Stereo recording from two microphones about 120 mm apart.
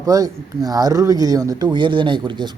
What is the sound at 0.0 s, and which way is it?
Speech, 30° right (ahead or behind).